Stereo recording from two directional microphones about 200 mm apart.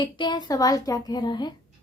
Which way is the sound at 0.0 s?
20° left (ahead or behind).